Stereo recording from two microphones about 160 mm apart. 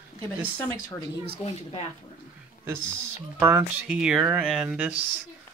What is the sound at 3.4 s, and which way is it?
Speech, 10° right (ahead or behind).